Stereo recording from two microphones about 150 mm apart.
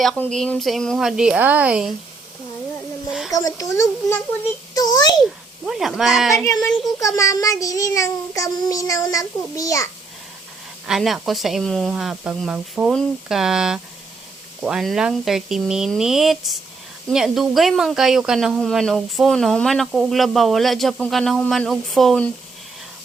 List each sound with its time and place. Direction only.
0.2 s speech: 5° left (ahead or behind)
3.1 s a sound: 5° right (ahead or behind)
3.3 s child singing: 25° left (ahead or behind)
4.7 s a child's voice: 25° left (ahead or behind)
5.6 s speech: 5° right (ahead or behind)
6.3 s child singing: 20° left (ahead or behind)
10.8 s speech: centre (ahead or behind)